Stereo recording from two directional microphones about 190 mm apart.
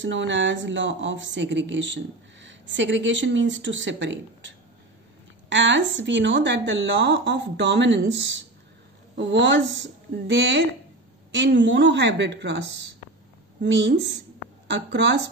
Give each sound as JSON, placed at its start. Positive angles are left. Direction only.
{"t": 0.0, "sound": "speech", "side_deg": -70}
{"t": 9.1, "sound": "a woman's voice", "side_deg": -70}